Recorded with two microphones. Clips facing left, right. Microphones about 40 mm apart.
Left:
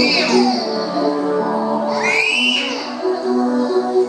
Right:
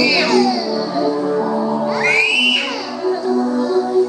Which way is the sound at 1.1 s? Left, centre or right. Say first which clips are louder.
Even; centre.